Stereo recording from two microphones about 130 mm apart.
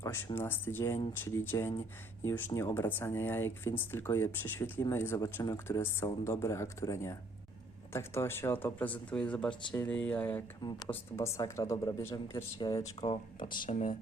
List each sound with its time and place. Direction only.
0.0 s a sound: 20° left (ahead or behind)
0.3 s speech: 15° left (ahead or behind)
10.6 s speech: 30° left (ahead or behind)
10.8 s speech: 20° left (ahead or behind)
12.5 s speech: 35° left (ahead or behind)
13.7 s speech: 60° left (ahead or behind)